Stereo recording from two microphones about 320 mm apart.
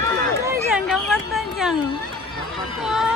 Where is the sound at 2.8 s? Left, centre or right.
Centre.